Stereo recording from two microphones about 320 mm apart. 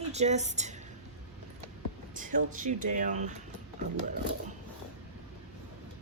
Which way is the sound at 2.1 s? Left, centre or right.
Right.